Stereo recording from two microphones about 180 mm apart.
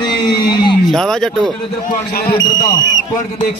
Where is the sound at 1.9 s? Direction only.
55° left (ahead or behind).